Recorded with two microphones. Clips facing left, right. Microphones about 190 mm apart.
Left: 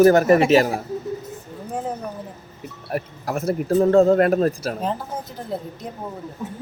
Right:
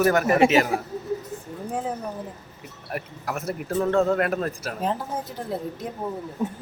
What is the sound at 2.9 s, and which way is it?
A man's voice, 35° left (ahead or behind).